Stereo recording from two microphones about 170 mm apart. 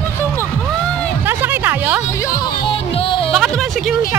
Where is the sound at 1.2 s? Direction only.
10° right (ahead or behind).